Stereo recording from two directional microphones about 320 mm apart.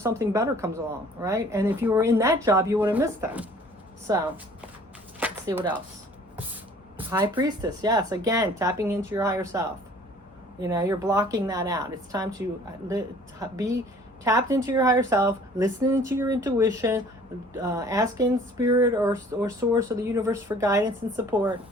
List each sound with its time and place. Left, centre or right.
0.0 s speech: centre
5.2 s chopping: centre
6.9 s speech: centre